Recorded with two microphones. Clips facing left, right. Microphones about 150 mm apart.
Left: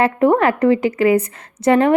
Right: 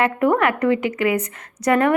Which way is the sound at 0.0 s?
30° left (ahead or behind).